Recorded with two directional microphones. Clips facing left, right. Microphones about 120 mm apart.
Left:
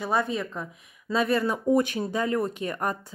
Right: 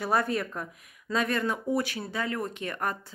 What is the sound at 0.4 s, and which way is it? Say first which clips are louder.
Speech: left 1 dB; 5° right (ahead or behind).